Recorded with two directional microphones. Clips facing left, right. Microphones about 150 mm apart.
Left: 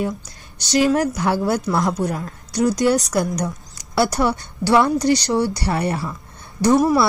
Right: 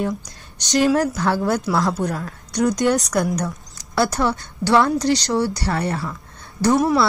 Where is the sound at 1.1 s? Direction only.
15° left (ahead or behind).